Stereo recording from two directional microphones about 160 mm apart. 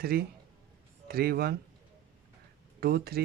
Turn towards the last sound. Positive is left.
turn(degrees=-75)  # may be behind; listen again after turning